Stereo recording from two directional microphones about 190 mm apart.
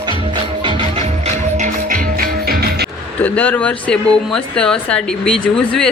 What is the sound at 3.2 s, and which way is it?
Speech, 10° left (ahead or behind).